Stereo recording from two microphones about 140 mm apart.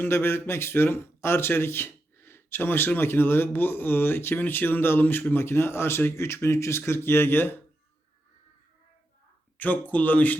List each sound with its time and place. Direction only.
0.0 s speech: 15° left (ahead or behind)
9.6 s speech: 10° left (ahead or behind)